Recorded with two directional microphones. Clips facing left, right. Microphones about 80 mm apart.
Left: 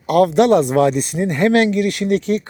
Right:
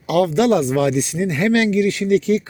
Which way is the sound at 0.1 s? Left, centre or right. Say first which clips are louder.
Left 3 dB; left.